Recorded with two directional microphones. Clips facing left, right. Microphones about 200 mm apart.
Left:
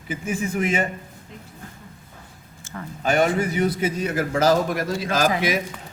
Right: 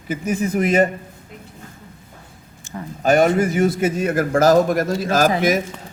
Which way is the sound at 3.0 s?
40° right (ahead or behind).